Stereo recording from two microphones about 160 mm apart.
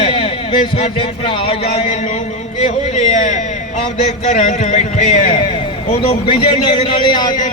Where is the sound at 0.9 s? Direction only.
35° left (ahead or behind).